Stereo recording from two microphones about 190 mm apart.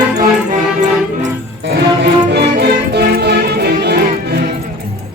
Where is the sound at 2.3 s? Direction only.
60° right (ahead or behind).